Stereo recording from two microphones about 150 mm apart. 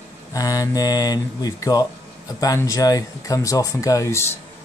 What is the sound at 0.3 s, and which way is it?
Speech, 25° left (ahead or behind).